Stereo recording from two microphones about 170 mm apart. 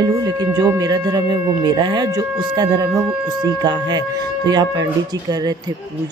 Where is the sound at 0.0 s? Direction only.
20° right (ahead or behind).